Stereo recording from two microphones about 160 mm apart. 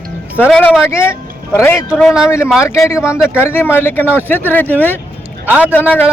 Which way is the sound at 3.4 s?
15° left (ahead or behind).